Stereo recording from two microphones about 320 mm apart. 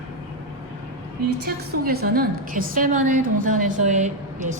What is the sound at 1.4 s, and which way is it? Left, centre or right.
A woman's voice, right.